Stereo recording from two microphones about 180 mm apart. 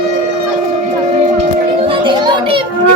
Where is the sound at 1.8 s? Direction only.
30° right (ahead or behind).